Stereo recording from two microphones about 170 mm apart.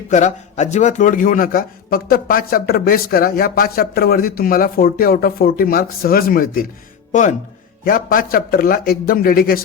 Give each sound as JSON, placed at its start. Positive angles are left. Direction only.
{"t": 0.1, "sound": "a man's voice", "side_deg": 45}
{"t": 7.1, "sound": "speech", "side_deg": 45}
{"t": 7.9, "sound": "a man's voice", "side_deg": 55}